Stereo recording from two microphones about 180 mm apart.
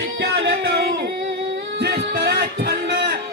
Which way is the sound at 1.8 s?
65° right (ahead or behind).